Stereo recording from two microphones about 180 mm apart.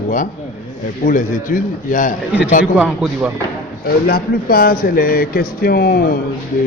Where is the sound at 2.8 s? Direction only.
5° right (ahead or behind).